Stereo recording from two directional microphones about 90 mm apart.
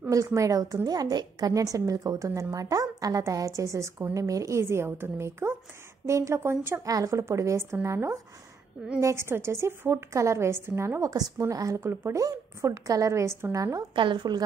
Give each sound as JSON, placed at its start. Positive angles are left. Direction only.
{"t": 0.1, "sound": "a woman's voice", "side_deg": -40}
{"t": 6.8, "sound": "a woman's voice", "side_deg": -40}
{"t": 13.9, "sound": "a woman's voice", "side_deg": -60}